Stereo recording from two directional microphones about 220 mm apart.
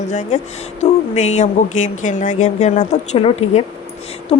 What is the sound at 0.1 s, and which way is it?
Speech, 30° left (ahead or behind).